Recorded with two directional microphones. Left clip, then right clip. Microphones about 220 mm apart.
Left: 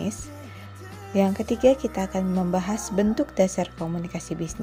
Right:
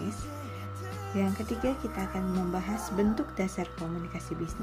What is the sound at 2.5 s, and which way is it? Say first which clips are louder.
A woman's voice: left 7 dB; 35° left (ahead or behind).